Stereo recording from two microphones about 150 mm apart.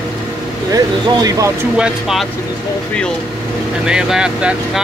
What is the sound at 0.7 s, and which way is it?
Speech, 25° right (ahead or behind).